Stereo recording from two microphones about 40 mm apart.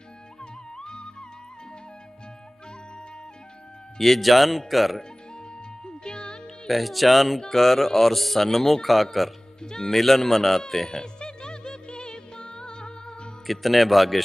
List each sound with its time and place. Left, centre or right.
0.4 s music: centre
4.0 s speech: centre
5.9 s music: left
6.7 s speech: centre
9.6 s speech: centre
9.9 s speech: centre
10.6 s music: centre
13.5 s speech: centre